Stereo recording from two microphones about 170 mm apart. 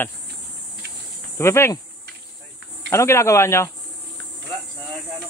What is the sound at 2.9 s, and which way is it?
Speech, 15° left (ahead or behind).